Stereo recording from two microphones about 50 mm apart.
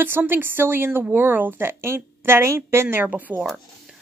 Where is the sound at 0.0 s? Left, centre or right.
Right.